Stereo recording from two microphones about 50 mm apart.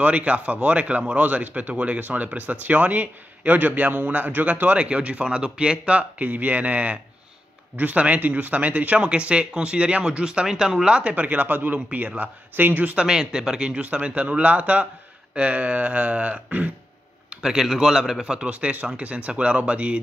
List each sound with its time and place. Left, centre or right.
0.0 s speech: right
12.9 s speech: centre
17.3 s a man's voice: centre
18.2 s speech: right